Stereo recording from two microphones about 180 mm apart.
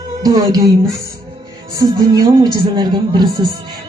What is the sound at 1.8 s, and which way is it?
Speech, 20° right (ahead or behind).